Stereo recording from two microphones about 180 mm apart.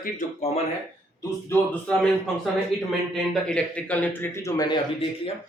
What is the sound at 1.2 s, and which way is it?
A man's voice, 10° left (ahead or behind).